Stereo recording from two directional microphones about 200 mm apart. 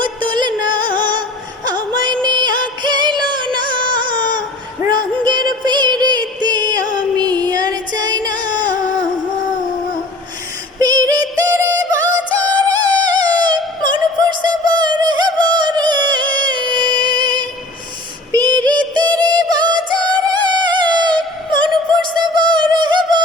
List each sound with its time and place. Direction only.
0.0 s music: 25° right (ahead or behind)
10.8 s synthetic singing: 20° right (ahead or behind)
12.5 s music: 20° right (ahead or behind)
18.3 s female singing: 20° right (ahead or behind)
18.7 s music: 20° right (ahead or behind)
22.2 s music: 20° right (ahead or behind)
22.7 s a sound: 20° right (ahead or behind)